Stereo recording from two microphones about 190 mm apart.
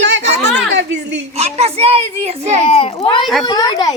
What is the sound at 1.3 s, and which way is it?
A child's voice, 35° right (ahead or behind).